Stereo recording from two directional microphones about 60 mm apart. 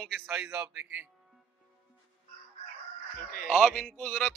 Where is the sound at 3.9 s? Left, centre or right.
Left.